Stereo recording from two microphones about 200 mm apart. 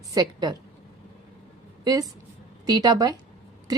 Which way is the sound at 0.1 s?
20° right (ahead or behind).